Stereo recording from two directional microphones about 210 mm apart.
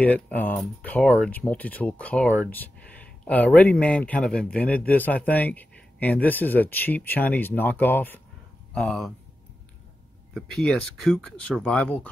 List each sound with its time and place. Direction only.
0.0 s speech: 5° left (ahead or behind)
10.3 s speech: centre (ahead or behind)